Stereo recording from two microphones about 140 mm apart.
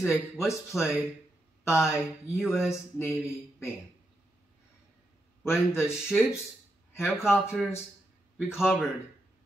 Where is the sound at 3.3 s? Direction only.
20° left (ahead or behind).